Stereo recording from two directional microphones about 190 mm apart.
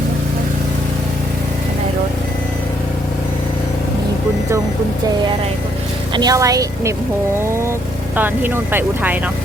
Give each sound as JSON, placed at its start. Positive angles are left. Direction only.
{"t": 6.1, "sound": "speech", "side_deg": -20}
{"t": 8.1, "sound": "speech", "side_deg": -10}